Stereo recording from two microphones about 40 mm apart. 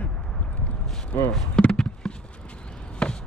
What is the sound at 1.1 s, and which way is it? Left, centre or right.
Speech, left.